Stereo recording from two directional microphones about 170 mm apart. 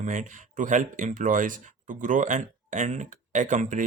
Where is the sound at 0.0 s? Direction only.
45° right (ahead or behind).